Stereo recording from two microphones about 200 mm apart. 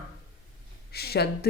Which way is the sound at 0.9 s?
50° left (ahead or behind).